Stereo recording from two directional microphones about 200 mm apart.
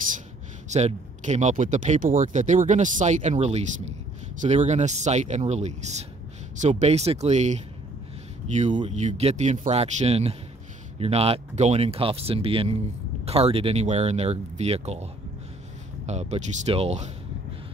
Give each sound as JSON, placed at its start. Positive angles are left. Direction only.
{"t": 0.7, "sound": "speech", "side_deg": -35}
{"t": 16.1, "sound": "speech", "side_deg": -35}